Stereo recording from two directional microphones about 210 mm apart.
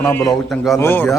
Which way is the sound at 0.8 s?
10° left (ahead or behind).